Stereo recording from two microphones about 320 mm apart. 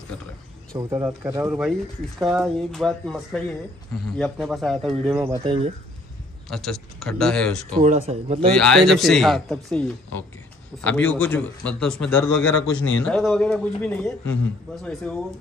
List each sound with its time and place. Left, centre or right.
0.7 s speech: centre
6.5 s speech: centre
7.8 s speech: right
8.5 s speech: centre
12.4 s a man's voice: left
13.0 s speech: centre